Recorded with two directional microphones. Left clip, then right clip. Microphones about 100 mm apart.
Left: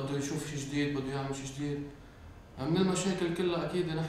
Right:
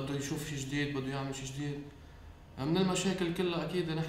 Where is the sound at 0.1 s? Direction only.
30° left (ahead or behind).